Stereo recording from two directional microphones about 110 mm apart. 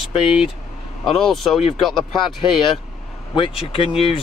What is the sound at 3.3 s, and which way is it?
Speech, 55° left (ahead or behind).